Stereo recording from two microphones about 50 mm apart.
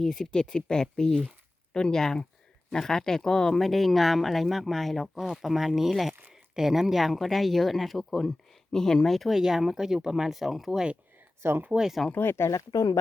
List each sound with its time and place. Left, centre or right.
0.0 s speech: centre
9.1 s speech: centre
12.1 s speech: left